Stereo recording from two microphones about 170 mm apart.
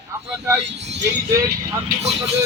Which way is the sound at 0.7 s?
90° right.